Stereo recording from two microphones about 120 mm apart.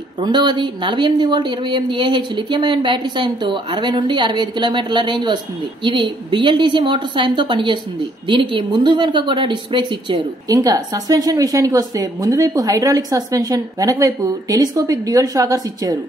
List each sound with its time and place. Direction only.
0.2 s a woman's voice: 40° right (ahead or behind)